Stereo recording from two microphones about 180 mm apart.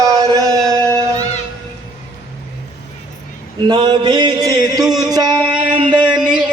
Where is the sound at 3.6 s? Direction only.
25° right (ahead or behind).